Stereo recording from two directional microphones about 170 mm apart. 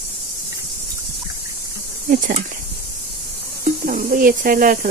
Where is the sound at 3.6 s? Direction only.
55° right (ahead or behind).